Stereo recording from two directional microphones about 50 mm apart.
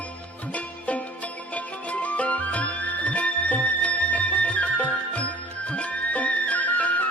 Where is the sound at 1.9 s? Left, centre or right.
Left.